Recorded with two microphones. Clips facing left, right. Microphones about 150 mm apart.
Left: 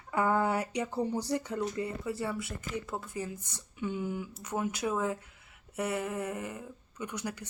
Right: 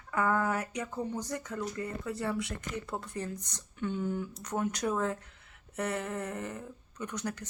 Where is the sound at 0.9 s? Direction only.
35° left (ahead or behind).